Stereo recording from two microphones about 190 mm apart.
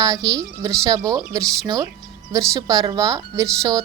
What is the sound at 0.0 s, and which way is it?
A woman's voice, 20° right (ahead or behind).